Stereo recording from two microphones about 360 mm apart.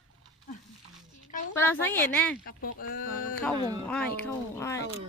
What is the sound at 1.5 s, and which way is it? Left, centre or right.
Speech, centre.